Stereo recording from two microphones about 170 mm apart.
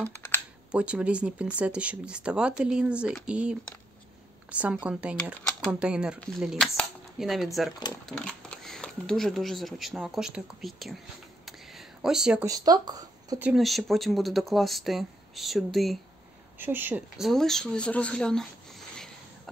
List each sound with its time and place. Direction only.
0.0 s computer keyboard: 15° left (ahead or behind)
0.7 s speech: 5° right (ahead or behind)
11.4 s a sound: centre (ahead or behind)
12.4 s speech: 20° right (ahead or behind)
13.4 s speech: centre (ahead or behind)
16.5 s speech: 10° right (ahead or behind)
17.3 s speech: centre (ahead or behind)